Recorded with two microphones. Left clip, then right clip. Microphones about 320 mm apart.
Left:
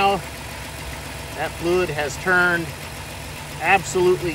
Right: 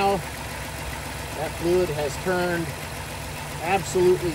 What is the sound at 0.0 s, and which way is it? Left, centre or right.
Vehicle, centre.